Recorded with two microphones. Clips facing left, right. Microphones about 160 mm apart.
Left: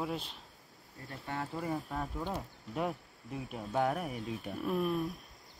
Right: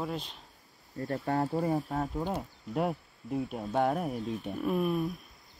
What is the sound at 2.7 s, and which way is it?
Speech, 40° right (ahead or behind).